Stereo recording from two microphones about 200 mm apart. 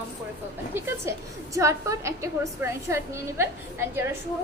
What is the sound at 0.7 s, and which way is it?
A woman's voice, 10° right (ahead or behind).